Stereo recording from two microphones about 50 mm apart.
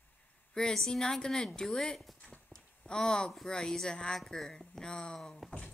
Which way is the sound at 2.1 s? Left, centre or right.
Left.